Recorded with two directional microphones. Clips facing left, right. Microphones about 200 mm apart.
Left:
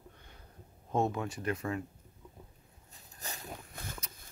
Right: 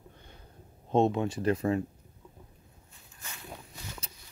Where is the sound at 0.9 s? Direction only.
25° right (ahead or behind).